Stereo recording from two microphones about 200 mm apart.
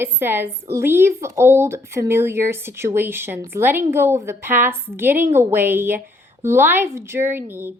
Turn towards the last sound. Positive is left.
turn(degrees=-10)  # may be behind; listen again after turning